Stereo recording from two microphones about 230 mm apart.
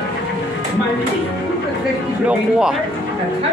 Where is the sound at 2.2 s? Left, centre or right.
Centre.